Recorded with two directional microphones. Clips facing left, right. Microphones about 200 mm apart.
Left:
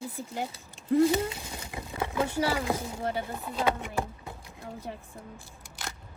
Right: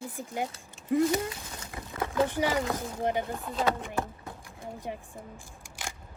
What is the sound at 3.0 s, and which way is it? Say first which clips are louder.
Speech: right 3 dB; 15° right (ahead or behind).